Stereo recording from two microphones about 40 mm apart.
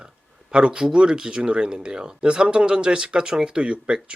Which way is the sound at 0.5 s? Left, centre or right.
Right.